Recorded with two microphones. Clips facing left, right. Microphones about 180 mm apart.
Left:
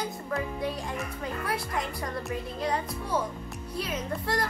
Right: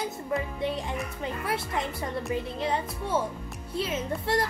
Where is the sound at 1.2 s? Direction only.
25° right (ahead or behind).